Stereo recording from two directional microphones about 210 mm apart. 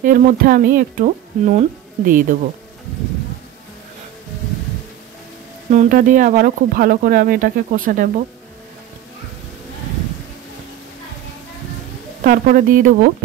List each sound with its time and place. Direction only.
0.0 s speech: 40° right (ahead or behind)
5.7 s speech: 40° right (ahead or behind)
12.2 s speech: 40° right (ahead or behind)